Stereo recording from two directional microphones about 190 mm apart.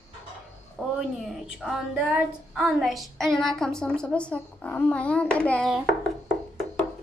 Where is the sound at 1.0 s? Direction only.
Centre (ahead or behind).